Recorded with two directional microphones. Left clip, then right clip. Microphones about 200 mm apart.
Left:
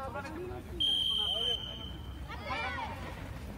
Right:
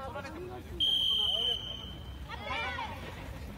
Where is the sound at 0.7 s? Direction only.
10° left (ahead or behind).